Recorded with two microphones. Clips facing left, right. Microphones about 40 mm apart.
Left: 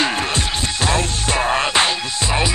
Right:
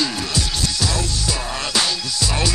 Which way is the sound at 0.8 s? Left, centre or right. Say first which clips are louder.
Left 4 dB; left.